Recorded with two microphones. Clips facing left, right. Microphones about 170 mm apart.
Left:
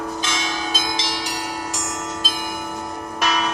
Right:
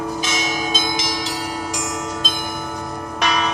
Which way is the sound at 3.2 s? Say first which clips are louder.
Right 1 dB; 5° left (ahead or behind).